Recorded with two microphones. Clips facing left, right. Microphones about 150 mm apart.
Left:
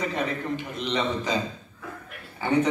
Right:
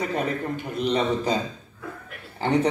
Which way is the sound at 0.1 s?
45° right (ahead or behind).